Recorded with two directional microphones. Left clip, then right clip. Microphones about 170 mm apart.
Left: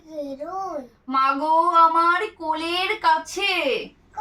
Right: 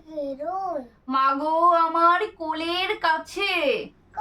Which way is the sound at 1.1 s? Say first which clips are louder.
Left 2 dB; 20° right (ahead or behind).